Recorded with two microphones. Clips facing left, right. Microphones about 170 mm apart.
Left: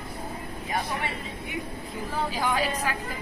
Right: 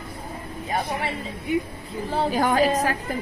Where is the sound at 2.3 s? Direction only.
45° right (ahead or behind).